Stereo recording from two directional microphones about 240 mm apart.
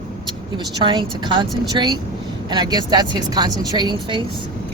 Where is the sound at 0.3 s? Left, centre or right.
Centre.